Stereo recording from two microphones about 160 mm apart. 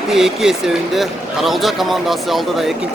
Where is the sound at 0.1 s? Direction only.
Centre (ahead or behind).